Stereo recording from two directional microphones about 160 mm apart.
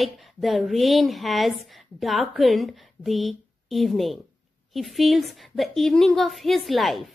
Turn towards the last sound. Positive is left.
turn(degrees=0)  # may be behind; listen again after turning